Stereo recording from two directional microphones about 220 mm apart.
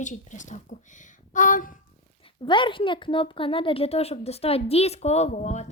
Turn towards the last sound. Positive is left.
turn(degrees=30)  # may be behind; listen again after turning